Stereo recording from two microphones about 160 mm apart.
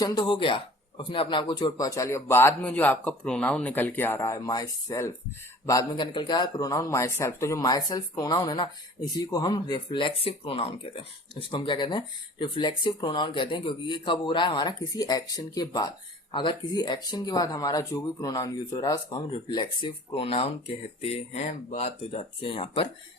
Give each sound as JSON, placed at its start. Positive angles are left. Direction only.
{"t": 0.0, "sound": "speech", "side_deg": 25}